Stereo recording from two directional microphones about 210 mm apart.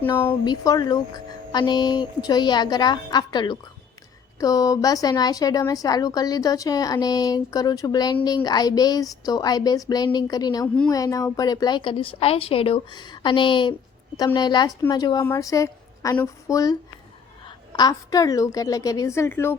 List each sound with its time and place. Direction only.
0.4 s a woman's voice: 20° left (ahead or behind)